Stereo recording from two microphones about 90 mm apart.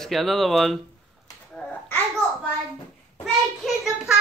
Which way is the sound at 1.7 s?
20° left (ahead or behind).